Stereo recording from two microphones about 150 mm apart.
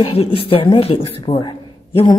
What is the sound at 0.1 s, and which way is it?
A woman's voice, 40° left (ahead or behind).